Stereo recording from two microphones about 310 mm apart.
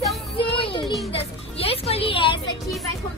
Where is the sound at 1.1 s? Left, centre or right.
Centre.